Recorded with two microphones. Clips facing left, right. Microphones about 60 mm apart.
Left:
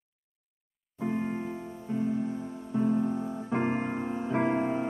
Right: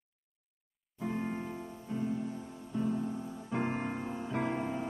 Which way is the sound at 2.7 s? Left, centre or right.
Left.